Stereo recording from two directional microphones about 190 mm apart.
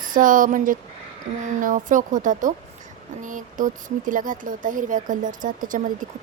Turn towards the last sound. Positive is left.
turn(degrees=-45)  # may be behind; listen again after turning